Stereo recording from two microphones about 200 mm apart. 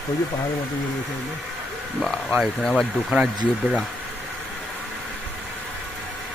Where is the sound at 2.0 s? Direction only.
Centre (ahead or behind).